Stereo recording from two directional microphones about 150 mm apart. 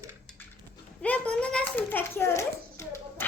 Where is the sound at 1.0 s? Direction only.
10° left (ahead or behind).